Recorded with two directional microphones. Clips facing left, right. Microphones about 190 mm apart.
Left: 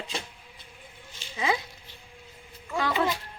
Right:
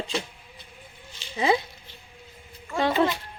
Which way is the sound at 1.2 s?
50° left (ahead or behind).